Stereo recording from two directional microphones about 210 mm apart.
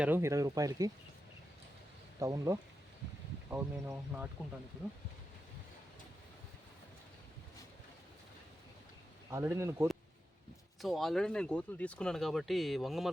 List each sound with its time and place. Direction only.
0.0 s speech: 10° right (ahead or behind)
2.1 s speech: 15° right (ahead or behind)
9.3 s speech: 10° right (ahead or behind)
10.8 s speech: centre (ahead or behind)